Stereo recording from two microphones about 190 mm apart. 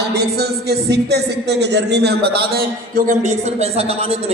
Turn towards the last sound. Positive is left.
turn(degrees=-30)  # may be behind; listen again after turning